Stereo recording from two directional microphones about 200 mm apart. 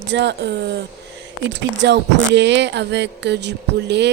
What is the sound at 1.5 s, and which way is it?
Speech, 60° right (ahead or behind).